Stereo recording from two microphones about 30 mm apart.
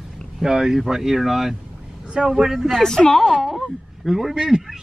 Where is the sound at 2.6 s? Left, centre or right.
Centre.